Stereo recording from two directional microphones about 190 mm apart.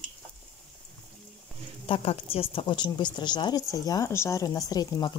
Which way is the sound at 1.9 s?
25° left (ahead or behind).